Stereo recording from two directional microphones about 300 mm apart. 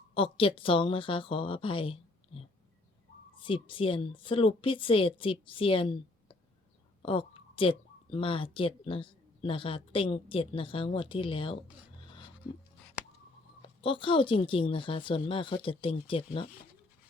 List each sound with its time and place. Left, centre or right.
0.1 s a woman's voice: centre
13.6 s a woman's voice: centre